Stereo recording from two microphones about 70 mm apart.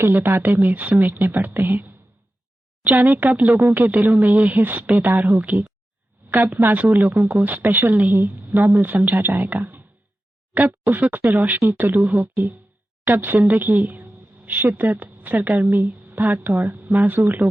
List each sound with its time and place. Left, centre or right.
0.0 s speech: right
6.2 s a sound: right
6.6 s speech: right
11.6 s speech: right
13.7 s a woman's voice: right